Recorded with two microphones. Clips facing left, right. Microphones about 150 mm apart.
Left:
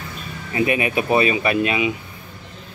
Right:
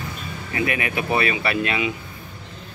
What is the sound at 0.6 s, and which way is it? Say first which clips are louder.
Speech: left 5 dB; 20° left (ahead or behind).